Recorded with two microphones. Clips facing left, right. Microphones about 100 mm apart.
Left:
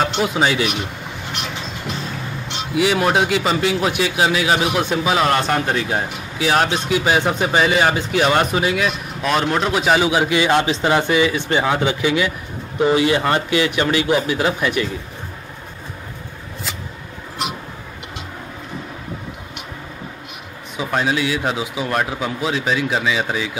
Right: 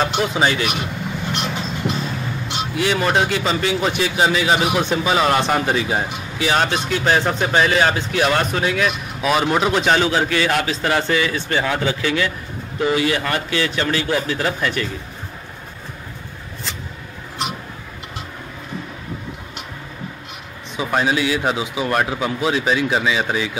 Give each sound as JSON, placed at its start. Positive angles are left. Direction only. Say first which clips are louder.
{"t": 0.2, "sound": "speech", "louder": "left 1 dB", "side_deg": 0}
{"t": 2.7, "sound": "a man's voice", "louder": "left 2 dB", "side_deg": 5}
{"t": 20.7, "sound": "speech", "louder": "right 1 dB", "side_deg": 0}